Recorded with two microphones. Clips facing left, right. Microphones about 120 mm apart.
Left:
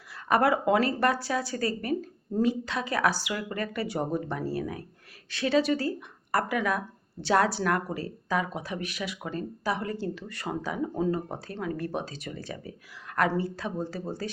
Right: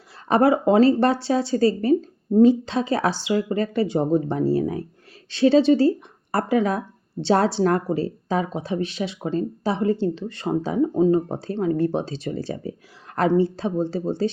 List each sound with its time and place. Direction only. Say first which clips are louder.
0.1 s speech: right 6 dB; 30° right (ahead or behind)